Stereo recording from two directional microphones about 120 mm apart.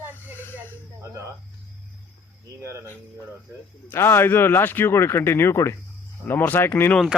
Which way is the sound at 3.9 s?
20° left (ahead or behind).